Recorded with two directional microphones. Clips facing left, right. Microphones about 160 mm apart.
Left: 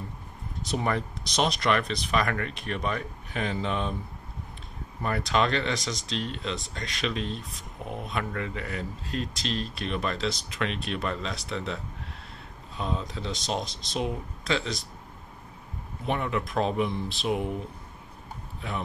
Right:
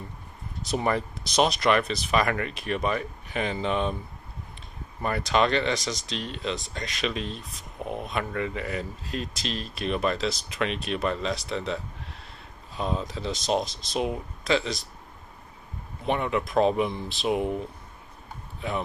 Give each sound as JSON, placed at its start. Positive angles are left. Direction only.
{"t": 0.7, "sound": "speech", "side_deg": -5}
{"t": 5.0, "sound": "speech", "side_deg": 0}
{"t": 13.0, "sound": "speech", "side_deg": 0}
{"t": 16.1, "sound": "speech", "side_deg": -5}